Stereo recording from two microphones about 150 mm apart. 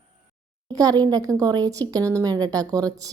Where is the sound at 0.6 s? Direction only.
25° right (ahead or behind).